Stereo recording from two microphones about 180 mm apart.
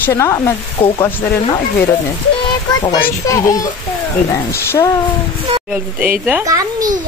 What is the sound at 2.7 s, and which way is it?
A child's voice, 20° left (ahead or behind).